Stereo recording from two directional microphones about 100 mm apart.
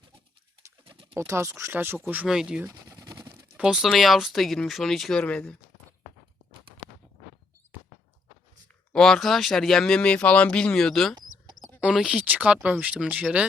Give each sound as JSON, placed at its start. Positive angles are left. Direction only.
{"t": 1.1, "sound": "speech", "side_deg": -30}
{"t": 2.2, "sound": "speech", "side_deg": -5}
{"t": 2.6, "sound": "a sound", "side_deg": -35}
{"t": 3.6, "sound": "speech", "side_deg": -5}
{"t": 8.9, "sound": "speech", "side_deg": 5}
{"t": 11.8, "sound": "speech", "side_deg": -5}